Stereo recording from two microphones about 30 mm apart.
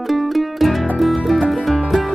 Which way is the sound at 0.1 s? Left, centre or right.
Centre.